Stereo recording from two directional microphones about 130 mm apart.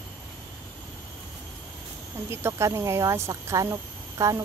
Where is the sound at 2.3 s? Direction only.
20° right (ahead or behind).